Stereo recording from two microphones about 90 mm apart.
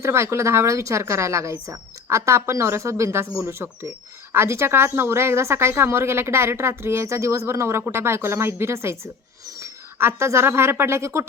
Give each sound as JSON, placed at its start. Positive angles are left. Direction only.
{"t": 0.0, "sound": "a woman's voice", "side_deg": -30}